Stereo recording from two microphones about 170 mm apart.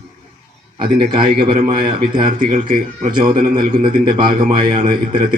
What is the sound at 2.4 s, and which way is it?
Speech, 55° right (ahead or behind).